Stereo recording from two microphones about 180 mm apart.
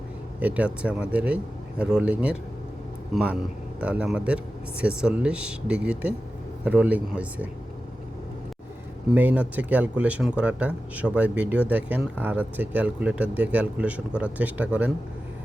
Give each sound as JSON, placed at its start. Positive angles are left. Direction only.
{"t": 0.3, "sound": "speech", "side_deg": -10}
{"t": 9.1, "sound": "speech", "side_deg": -10}